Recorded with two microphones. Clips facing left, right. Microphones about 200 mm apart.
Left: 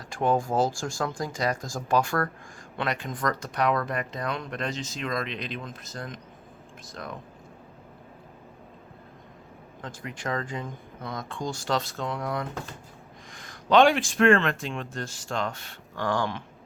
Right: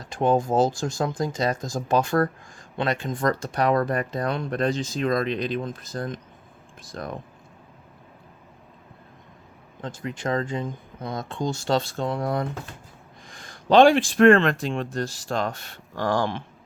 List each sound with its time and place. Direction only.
0.0 s speech: 20° right (ahead or behind); by 7.1 s 45° right (ahead or behind)
9.8 s speech: 25° right (ahead or behind)